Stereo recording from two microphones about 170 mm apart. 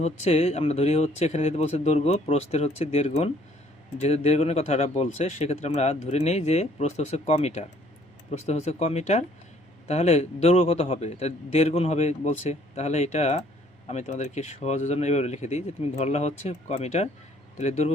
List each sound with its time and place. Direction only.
0.0 s speech: 40° left (ahead or behind)